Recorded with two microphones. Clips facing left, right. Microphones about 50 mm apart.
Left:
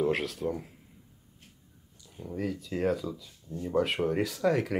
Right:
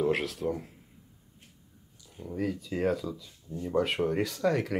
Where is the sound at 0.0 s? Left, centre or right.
Centre.